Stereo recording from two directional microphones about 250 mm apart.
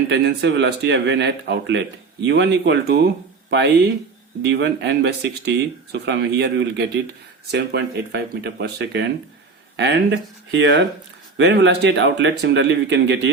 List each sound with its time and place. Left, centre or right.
0.1 s speech: right